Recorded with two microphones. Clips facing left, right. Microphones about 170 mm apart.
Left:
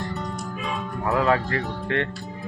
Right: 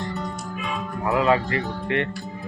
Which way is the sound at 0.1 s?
Centre (ahead or behind).